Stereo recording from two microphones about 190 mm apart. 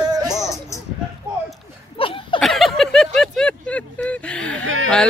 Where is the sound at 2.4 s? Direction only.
Centre (ahead or behind).